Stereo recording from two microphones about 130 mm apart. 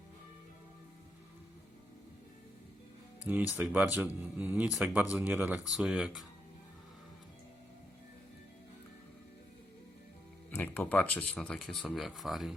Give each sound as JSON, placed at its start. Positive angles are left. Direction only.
{"t": 3.2, "sound": "speech", "side_deg": -15}
{"t": 10.5, "sound": "speech", "side_deg": 15}